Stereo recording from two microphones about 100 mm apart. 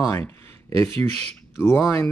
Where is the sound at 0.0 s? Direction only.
30° left (ahead or behind).